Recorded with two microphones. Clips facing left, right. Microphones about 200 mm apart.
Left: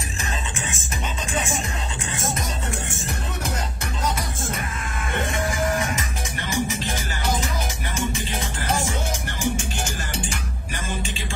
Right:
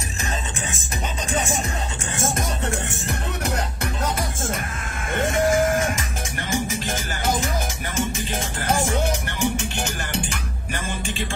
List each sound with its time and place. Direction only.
1.3 s music: 40° right (ahead or behind)
2.1 s music: 55° right (ahead or behind)
5.2 s music: 45° right (ahead or behind)
8.4 s music: 50° right (ahead or behind)
9.4 s music: 60° right (ahead or behind)